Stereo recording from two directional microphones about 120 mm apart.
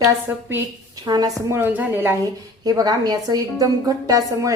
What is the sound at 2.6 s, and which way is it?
A woman's voice, 35° right (ahead or behind).